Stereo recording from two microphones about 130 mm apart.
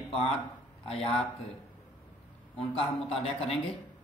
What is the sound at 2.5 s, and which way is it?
Speech, 50° left (ahead or behind).